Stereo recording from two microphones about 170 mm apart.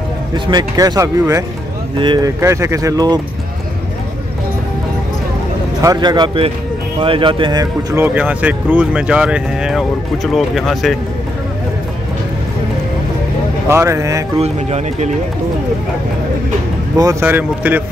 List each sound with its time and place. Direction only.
0.5 s speech: 25° right (ahead or behind)
5.8 s speech: 20° right (ahead or behind)
7.9 s speech: 10° right (ahead or behind)
13.7 s speech: 15° right (ahead or behind)
14.4 s speech: 40° right (ahead or behind)
16.9 s speech: 20° right (ahead or behind)